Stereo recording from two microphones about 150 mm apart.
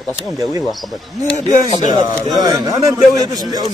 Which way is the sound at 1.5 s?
55° left (ahead or behind).